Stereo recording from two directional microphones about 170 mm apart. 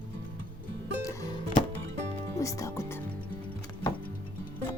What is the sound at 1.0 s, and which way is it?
Music, 20° left (ahead or behind).